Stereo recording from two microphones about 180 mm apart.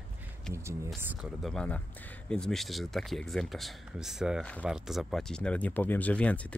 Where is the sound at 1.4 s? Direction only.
5° left (ahead or behind).